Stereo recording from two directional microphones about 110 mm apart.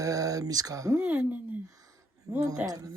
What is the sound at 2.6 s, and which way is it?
Speech, 35° right (ahead or behind).